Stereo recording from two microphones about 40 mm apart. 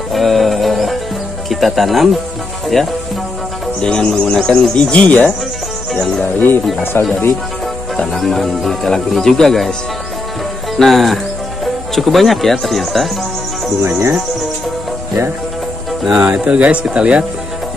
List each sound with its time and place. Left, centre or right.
0.1 s music: centre
1.5 s speech: centre
3.8 s speech: left
4.9 s speech: left
6.2 s speech: left
7.0 s speech: left
8.1 s speech: centre
10.8 s speech: centre
16.2 s speech: right